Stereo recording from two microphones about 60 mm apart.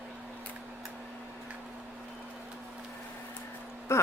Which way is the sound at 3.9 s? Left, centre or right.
Left.